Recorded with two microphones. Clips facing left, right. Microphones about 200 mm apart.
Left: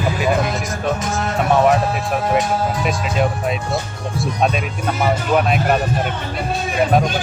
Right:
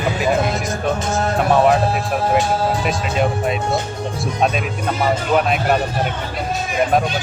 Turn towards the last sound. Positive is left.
turn(degrees=0)  # may be behind; listen again after turning